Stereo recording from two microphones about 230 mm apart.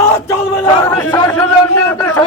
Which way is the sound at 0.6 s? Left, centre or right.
Centre.